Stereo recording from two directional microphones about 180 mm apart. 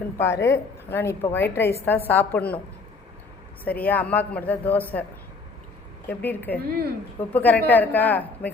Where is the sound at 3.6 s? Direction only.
10° left (ahead or behind).